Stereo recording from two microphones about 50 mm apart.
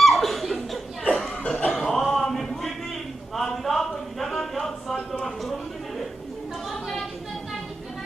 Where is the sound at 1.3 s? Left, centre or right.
Centre.